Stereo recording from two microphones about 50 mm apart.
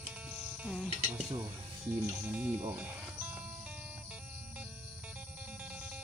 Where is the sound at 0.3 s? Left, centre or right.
Centre.